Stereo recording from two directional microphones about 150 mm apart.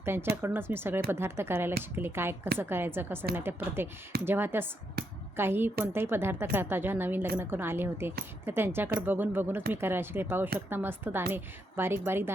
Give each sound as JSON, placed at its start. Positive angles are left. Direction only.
{"t": 0.0, "sound": "a woman's voice", "side_deg": -15}